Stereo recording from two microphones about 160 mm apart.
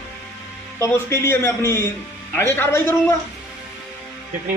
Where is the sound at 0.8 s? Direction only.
15° left (ahead or behind).